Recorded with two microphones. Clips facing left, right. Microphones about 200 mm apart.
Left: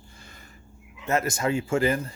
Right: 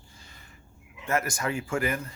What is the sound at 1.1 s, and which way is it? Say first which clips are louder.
A man's voice: left 4 dB; 25° left (ahead or behind).